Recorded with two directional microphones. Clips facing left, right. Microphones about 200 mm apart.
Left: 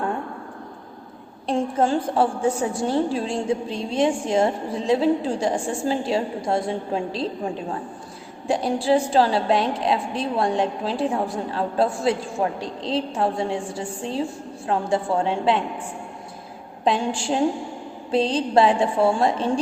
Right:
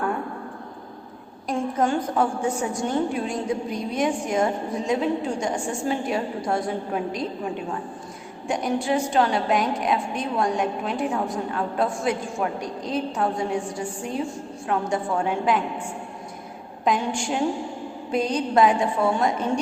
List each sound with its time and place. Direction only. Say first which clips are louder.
1.5 s a woman's voice: left 2 dB; 30° left (ahead or behind)
16.8 s a woman's voice: left 1 dB; 30° left (ahead or behind)